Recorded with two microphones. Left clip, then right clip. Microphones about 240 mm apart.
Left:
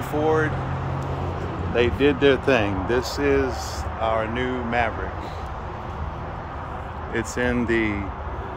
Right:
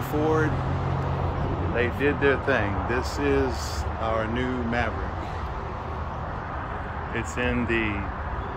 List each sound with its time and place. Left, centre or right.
0.2 s speech: centre
1.8 s speech: left
3.3 s speech: centre
7.2 s speech: left